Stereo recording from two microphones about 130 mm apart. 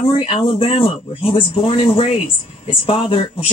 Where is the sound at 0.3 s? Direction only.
50° left (ahead or behind).